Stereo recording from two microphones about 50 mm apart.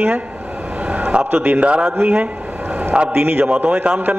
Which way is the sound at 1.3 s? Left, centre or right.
Right.